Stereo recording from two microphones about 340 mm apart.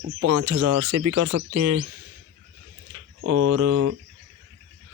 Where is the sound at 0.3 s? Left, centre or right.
Right.